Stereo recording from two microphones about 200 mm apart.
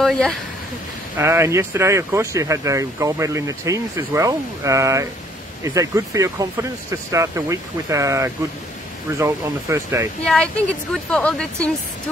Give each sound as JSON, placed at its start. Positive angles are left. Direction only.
{"t": 0.0, "sound": "speech", "side_deg": 0}
{"t": 1.1, "sound": "speech", "side_deg": -15}
{"t": 10.2, "sound": "speech", "side_deg": 5}